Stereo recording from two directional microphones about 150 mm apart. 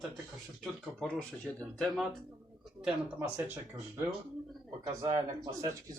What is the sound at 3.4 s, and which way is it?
Speech, 15° right (ahead or behind).